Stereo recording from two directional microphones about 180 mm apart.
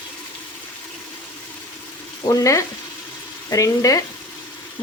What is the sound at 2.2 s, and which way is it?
Frying, 20° left (ahead or behind).